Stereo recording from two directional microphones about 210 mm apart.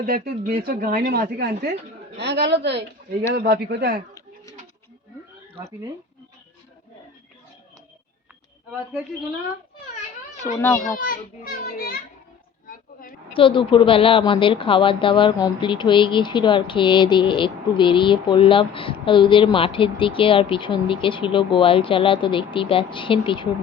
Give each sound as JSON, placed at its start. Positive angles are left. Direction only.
{"t": 0.0, "sound": "a man's voice", "side_deg": -45}
{"t": 10.9, "sound": "a child's voice", "side_deg": 40}
{"t": 12.6, "sound": "oink", "side_deg": 40}
{"t": 13.3, "sound": "a woman's voice", "side_deg": 25}